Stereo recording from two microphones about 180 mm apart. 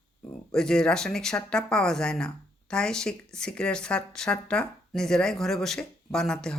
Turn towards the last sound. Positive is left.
turn(degrees=5)  # may be behind; listen again after turning